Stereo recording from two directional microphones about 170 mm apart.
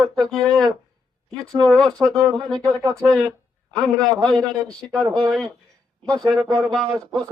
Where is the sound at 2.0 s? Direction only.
20° right (ahead or behind).